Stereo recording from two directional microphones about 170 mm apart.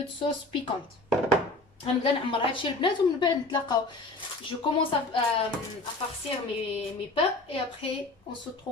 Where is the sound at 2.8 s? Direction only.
25° left (ahead or behind).